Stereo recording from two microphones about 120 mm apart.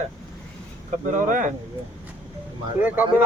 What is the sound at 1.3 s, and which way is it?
Speech, 90° right.